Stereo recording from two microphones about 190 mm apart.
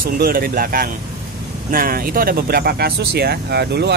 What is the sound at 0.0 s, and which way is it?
Speech, 50° right (ahead or behind).